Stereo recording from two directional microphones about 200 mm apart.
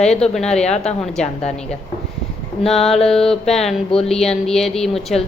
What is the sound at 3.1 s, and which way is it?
A woman's voice, centre (ahead or behind).